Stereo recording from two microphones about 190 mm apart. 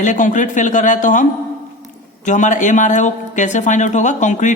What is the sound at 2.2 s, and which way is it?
Speech, 40° left (ahead or behind).